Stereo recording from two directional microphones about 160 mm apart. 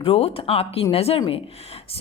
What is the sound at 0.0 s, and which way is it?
A woman's voice, 35° left (ahead or behind).